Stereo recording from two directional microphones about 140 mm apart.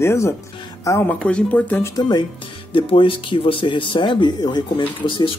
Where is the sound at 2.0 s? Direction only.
35° left (ahead or behind).